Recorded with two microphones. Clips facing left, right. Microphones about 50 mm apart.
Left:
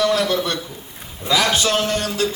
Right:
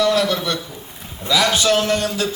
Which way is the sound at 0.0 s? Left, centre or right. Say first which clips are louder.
Right 1 dB; left.